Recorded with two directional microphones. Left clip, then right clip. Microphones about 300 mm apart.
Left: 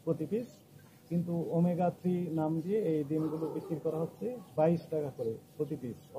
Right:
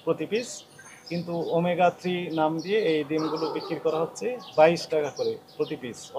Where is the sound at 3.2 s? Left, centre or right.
Centre.